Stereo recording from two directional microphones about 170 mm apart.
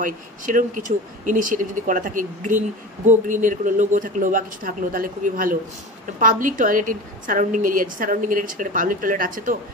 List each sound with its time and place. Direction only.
0.0 s a woman's voice: 50° right (ahead or behind)